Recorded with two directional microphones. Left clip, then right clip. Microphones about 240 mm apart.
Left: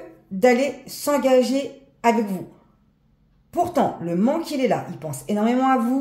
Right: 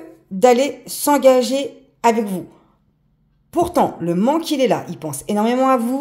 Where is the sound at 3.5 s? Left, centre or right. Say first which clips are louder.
Right 4 dB; right.